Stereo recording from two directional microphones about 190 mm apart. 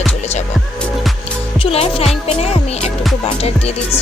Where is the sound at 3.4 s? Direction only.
30° left (ahead or behind).